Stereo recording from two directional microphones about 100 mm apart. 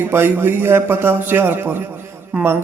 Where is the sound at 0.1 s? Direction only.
25° right (ahead or behind).